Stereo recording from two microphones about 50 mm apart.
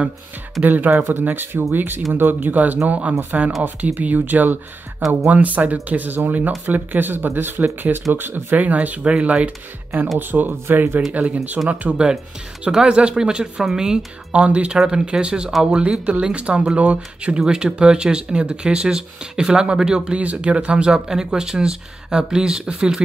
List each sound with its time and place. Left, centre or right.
0.7 s speech: right
0.9 s speech: right
8.5 s speech: right
10.1 s speech: right
11.6 s speech: right
12.7 s speech: centre
17.5 s speech: centre